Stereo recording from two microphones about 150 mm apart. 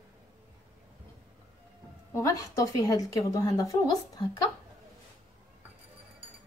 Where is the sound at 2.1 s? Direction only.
20° left (ahead or behind).